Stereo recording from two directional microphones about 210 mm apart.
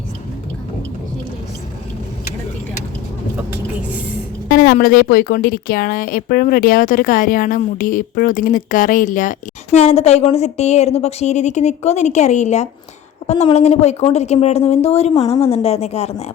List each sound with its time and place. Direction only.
4.4 s a woman's voice: 45° left (ahead or behind)